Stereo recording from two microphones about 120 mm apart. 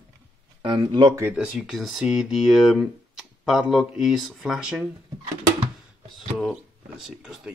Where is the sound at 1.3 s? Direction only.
10° right (ahead or behind).